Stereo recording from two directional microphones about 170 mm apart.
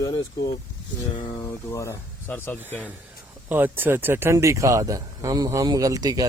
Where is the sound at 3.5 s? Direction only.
10° right (ahead or behind).